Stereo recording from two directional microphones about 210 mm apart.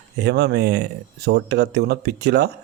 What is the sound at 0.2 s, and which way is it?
Speech, 55° right (ahead or behind).